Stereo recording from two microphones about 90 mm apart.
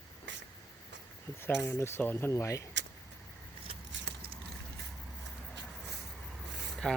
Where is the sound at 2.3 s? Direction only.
35° left (ahead or behind).